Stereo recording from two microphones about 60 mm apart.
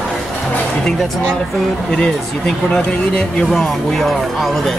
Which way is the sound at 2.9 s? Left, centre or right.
Centre.